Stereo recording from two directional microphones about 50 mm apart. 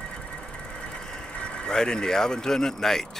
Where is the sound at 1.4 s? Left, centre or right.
Centre.